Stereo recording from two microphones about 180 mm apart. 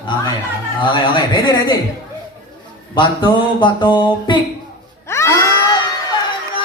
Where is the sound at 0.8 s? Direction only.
25° left (ahead or behind).